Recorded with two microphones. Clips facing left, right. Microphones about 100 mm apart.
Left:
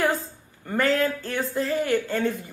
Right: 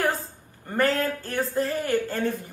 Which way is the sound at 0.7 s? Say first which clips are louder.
Left 1 dB; 40° right (ahead or behind).